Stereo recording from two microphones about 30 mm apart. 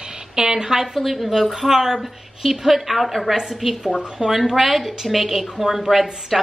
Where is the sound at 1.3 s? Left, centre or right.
Centre.